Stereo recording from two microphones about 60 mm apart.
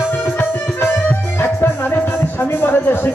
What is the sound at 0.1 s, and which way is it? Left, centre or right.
Music, left.